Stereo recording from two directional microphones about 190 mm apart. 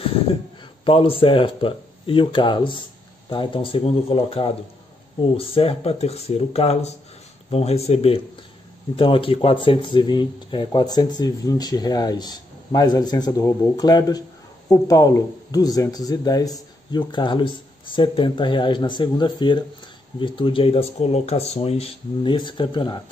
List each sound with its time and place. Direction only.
0.8 s speech: 30° left (ahead or behind)